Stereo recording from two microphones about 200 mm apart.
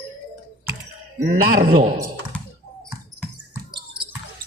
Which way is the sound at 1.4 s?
50° right (ahead or behind).